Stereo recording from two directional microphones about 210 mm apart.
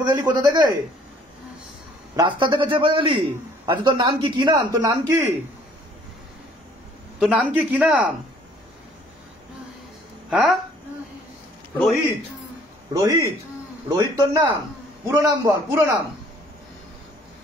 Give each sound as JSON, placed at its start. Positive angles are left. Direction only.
{"t": 0.0, "sound": "a man's voice", "side_deg": -20}
{"t": 2.1, "sound": "a man's voice", "side_deg": -20}
{"t": 7.2, "sound": "a man's voice", "side_deg": -5}
{"t": 10.3, "sound": "a man's voice", "side_deg": -5}
{"t": 11.8, "sound": "a man's voice", "side_deg": 5}
{"t": 12.9, "sound": "a man's voice", "side_deg": -15}